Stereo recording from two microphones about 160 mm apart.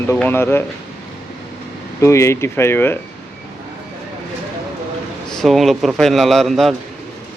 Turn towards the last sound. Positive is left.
turn(degrees=0)  # may be behind; listen again after turning